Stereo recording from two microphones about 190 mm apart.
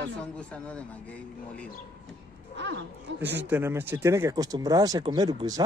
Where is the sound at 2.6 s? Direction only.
70° right (ahead or behind).